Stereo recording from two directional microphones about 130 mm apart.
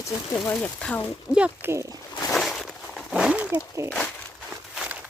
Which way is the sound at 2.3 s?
Centre (ahead or behind).